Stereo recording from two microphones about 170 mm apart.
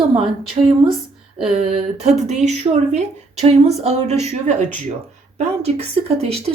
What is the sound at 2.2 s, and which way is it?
A woman's voice, 40° right (ahead or behind).